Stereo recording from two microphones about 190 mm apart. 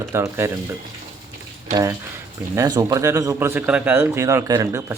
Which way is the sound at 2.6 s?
20° right (ahead or behind).